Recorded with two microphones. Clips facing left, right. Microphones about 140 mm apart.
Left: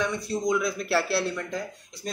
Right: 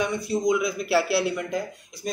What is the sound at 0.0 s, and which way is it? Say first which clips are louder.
Speech: right 3 dB; 5° right (ahead or behind).